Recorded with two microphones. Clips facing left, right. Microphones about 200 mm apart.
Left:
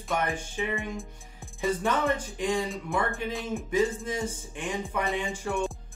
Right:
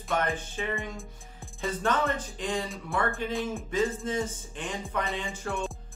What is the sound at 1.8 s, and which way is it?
Speech, 10° left (ahead or behind).